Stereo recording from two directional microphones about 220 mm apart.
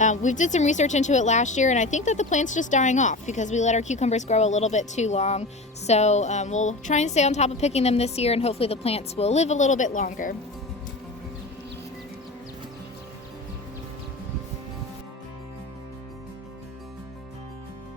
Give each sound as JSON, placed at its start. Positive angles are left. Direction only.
{"t": 0.0, "sound": "a woman's voice", "side_deg": 35}